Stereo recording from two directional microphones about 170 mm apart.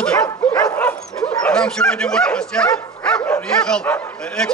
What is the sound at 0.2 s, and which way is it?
Dog, 20° left (ahead or behind).